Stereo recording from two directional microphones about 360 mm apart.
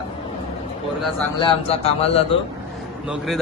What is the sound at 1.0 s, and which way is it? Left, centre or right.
Speech, centre.